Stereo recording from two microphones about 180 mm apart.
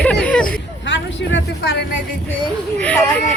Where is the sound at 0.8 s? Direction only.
90° left.